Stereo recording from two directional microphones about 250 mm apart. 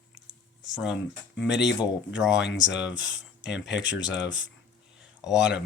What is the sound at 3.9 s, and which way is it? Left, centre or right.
Speech, left.